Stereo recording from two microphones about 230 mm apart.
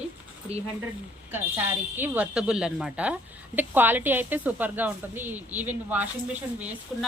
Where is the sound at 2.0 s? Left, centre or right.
Centre.